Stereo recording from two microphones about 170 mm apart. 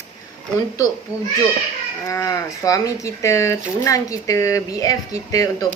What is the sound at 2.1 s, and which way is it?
Speech, 20° left (ahead or behind).